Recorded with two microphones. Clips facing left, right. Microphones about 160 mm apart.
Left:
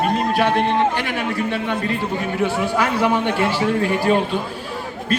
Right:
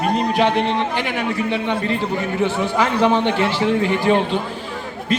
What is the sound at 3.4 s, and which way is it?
Speech, 10° left (ahead or behind).